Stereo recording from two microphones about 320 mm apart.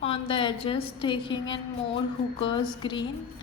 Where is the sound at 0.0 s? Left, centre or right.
Centre.